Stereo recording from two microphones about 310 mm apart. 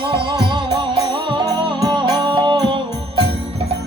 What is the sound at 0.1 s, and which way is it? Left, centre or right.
Music, centre.